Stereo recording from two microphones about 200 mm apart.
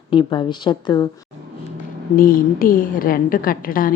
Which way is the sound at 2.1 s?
45° left (ahead or behind).